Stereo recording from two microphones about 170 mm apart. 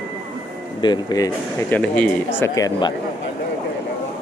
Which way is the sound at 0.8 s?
25° left (ahead or behind).